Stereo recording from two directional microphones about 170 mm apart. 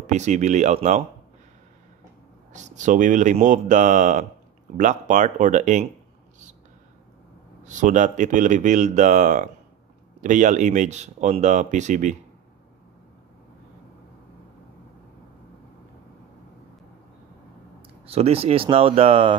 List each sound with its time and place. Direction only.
0.0 s speech: 45° right (ahead or behind)
2.5 s speech: 45° right (ahead or behind)
7.6 s speech: 45° right (ahead or behind)
18.0 s speech: 35° right (ahead or behind)